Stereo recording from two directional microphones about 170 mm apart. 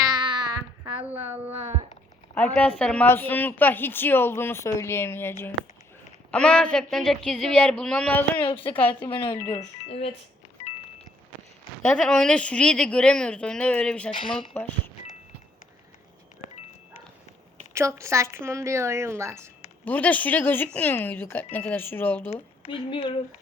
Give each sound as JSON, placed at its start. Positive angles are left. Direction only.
{"t": 0.1, "sound": "a sound", "side_deg": -25}
{"t": 1.5, "sound": "a sound", "side_deg": -40}
{"t": 2.3, "sound": "a woman's voice", "side_deg": 10}
{"t": 6.3, "sound": "a woman's voice", "side_deg": 5}
{"t": 11.8, "sound": "a woman's voice", "side_deg": 5}
{"t": 14.1, "sound": "a woman's voice", "side_deg": 30}
{"t": 17.7, "sound": "speech", "side_deg": -15}
{"t": 19.8, "sound": "a woman's voice", "side_deg": 10}
{"t": 22.3, "sound": "a woman's voice", "side_deg": 35}